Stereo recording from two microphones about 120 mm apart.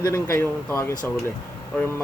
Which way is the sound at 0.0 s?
25° left (ahead or behind).